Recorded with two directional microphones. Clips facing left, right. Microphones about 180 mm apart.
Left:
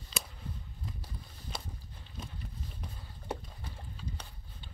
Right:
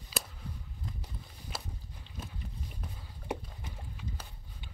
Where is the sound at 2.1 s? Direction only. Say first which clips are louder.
Even; 5° right (ahead or behind).